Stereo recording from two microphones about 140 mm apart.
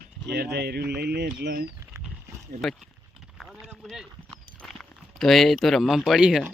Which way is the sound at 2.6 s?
Centre (ahead or behind).